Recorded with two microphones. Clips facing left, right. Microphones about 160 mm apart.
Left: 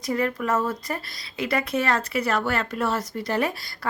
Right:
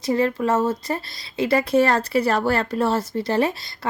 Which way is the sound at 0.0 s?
30° right (ahead or behind).